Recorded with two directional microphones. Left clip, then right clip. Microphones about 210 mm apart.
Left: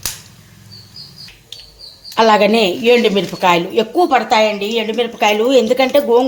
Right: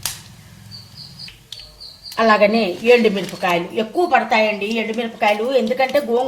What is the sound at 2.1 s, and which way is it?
A woman's voice, 40° left (ahead or behind).